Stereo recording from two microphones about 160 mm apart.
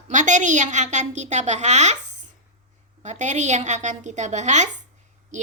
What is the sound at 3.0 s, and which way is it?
A woman's voice, 50° right (ahead or behind).